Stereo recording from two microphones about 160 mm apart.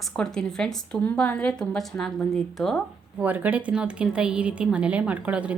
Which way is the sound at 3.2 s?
10° right (ahead or behind).